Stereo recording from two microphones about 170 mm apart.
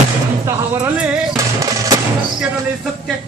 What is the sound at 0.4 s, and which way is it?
Music, 15° right (ahead or behind).